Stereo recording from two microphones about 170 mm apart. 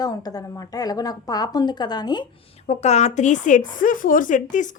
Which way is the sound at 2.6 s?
40° left (ahead or behind).